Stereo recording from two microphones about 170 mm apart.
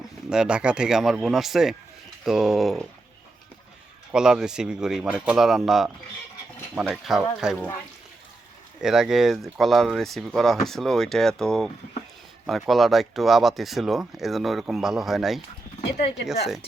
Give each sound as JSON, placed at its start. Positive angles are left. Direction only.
{"t": 0.3, "sound": "speech", "side_deg": -5}
{"t": 4.1, "sound": "speech", "side_deg": -5}
{"t": 6.9, "sound": "speech", "side_deg": 0}
{"t": 8.8, "sound": "speech", "side_deg": -5}